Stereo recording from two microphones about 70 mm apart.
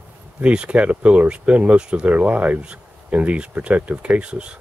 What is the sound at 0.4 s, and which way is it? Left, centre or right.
Speech, centre.